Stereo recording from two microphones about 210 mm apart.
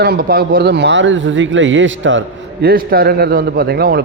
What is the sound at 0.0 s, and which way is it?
Speech, 45° right (ahead or behind).